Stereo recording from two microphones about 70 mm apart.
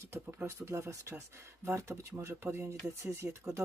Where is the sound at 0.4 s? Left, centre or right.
Right.